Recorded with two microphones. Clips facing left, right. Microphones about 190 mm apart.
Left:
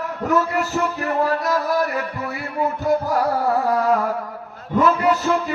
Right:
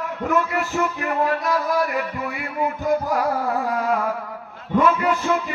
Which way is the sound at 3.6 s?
40° left (ahead or behind).